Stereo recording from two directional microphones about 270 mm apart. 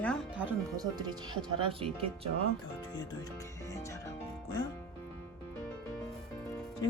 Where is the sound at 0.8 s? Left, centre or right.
Centre.